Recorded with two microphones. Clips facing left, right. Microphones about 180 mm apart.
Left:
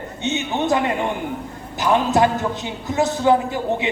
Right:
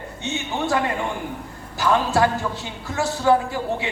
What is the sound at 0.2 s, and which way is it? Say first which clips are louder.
A man's voice: left 4 dB; 20° left (ahead or behind).